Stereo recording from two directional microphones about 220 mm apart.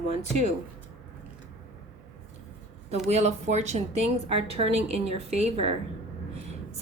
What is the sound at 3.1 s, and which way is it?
A woman's voice, 30° right (ahead or behind).